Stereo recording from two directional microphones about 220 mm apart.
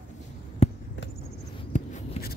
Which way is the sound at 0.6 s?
25° left (ahead or behind).